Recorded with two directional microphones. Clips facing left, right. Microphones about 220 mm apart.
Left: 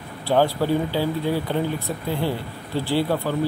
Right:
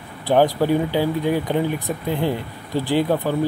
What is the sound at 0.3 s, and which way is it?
Speech, 15° right (ahead or behind).